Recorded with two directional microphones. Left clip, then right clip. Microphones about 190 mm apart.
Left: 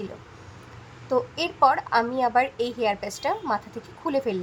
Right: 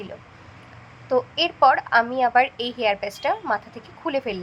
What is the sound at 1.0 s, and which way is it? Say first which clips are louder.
A woman's voice: right 4 dB; 5° right (ahead or behind).